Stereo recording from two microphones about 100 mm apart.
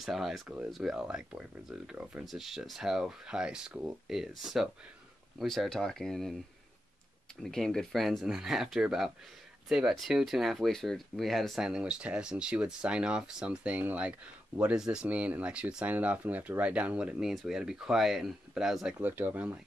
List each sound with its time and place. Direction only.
0.0 s speech: centre (ahead or behind)
7.4 s speech: 5° left (ahead or behind)
18.9 s speech: 20° right (ahead or behind)